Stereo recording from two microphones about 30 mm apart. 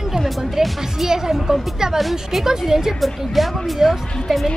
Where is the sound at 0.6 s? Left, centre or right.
Centre.